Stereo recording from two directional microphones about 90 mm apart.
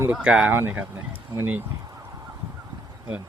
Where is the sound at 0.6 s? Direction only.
20° right (ahead or behind).